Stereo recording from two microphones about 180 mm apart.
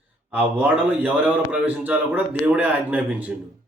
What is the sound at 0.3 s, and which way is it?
Speech, 10° right (ahead or behind).